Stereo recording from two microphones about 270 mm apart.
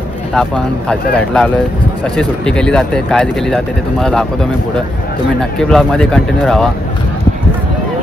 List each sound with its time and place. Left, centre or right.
0.3 s speech: centre
5.6 s speech: centre